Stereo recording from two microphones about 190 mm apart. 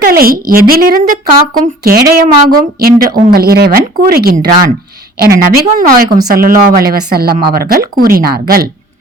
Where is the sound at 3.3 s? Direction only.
55° right (ahead or behind).